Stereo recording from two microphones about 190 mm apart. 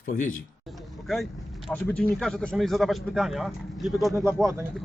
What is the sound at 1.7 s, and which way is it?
A man's voice, 5° left (ahead or behind).